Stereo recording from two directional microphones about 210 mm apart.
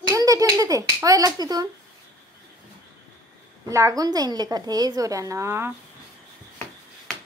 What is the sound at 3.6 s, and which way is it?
A woman's voice, 15° right (ahead or behind).